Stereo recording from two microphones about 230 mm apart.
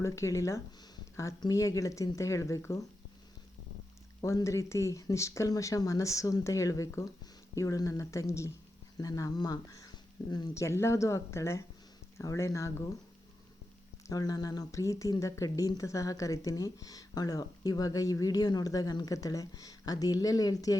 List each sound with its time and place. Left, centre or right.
0.0 s speech: centre
4.2 s speech: centre
14.1 s speech: centre